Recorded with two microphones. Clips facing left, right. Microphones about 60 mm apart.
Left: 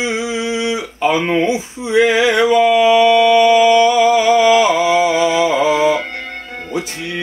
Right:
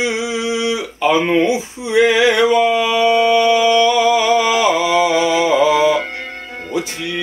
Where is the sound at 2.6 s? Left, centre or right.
Left.